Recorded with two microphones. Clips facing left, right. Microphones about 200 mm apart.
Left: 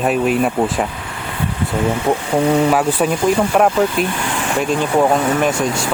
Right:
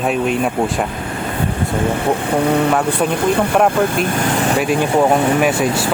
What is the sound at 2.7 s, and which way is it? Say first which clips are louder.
Speech: left 1 dB; 5° left (ahead or behind).